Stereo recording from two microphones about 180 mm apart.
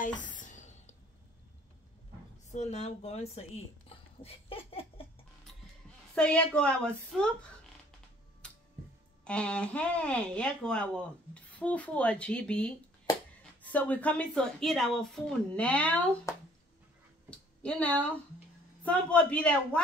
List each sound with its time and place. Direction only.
0.0 s music: 45° left (ahead or behind)
2.5 s speech: 40° left (ahead or behind)
6.1 s speech: 5° left (ahead or behind)
8.4 s music: 5° left (ahead or behind)
9.2 s a woman's voice: 5° left (ahead or behind)
17.3 s a sound: 5° left (ahead or behind)
18.8 s a woman's voice: 5° left (ahead or behind)